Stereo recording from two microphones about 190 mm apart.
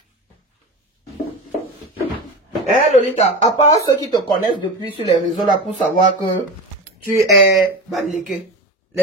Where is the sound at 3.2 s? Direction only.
35° left (ahead or behind).